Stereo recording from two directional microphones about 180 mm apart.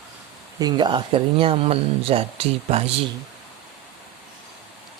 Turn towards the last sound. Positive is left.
turn(degrees=-30)  # may be behind; listen again after turning